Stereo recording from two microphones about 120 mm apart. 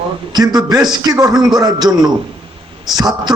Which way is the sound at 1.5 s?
35° right (ahead or behind).